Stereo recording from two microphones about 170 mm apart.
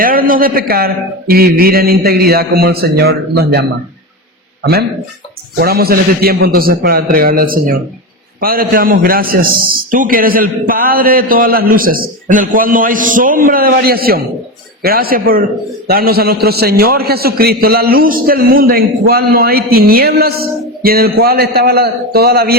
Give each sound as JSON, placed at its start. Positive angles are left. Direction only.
{"t": 0.0, "sound": "a man's voice", "side_deg": -55}